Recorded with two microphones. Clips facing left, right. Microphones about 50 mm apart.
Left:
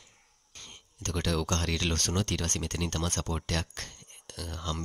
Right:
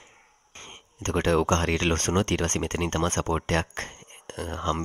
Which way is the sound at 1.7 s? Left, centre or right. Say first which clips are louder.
Right 7 dB; right.